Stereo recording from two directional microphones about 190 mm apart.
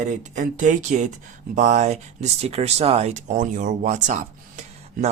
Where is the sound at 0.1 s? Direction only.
40° right (ahead or behind).